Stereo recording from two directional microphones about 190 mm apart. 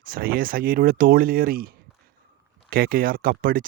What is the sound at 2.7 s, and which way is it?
Speech, 50° right (ahead or behind).